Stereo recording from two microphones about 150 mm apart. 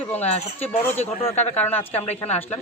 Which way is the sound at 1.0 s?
45° left (ahead or behind).